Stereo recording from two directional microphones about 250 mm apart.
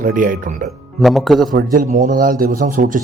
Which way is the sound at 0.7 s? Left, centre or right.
Centre.